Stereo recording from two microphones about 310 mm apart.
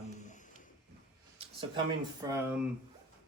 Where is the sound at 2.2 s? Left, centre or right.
Centre.